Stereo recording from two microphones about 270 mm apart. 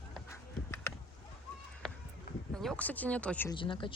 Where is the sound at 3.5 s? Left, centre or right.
Centre.